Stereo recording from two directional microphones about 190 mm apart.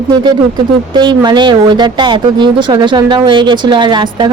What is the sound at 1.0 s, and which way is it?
A woman's voice, 25° right (ahead or behind).